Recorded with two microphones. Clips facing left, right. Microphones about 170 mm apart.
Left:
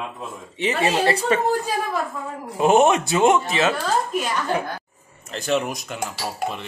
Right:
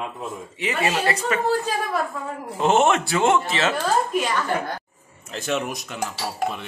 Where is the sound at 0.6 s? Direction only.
25° left (ahead or behind).